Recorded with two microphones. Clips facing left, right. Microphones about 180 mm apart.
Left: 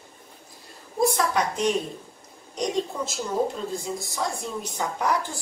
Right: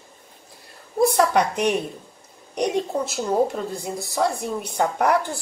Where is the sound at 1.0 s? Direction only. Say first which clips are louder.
Right 5 dB; 60° right (ahead or behind).